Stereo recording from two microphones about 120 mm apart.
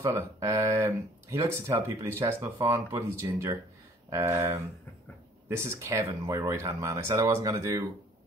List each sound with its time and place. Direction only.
0.0 s speech: 25° right (ahead or behind)